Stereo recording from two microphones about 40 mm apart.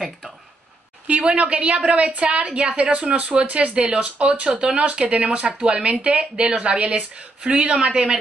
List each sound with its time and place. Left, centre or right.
1.0 s a woman's voice: right